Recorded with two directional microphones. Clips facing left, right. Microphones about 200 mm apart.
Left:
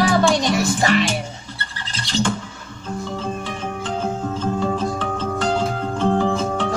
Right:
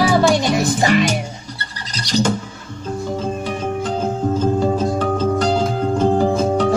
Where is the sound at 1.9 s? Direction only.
40° right (ahead or behind).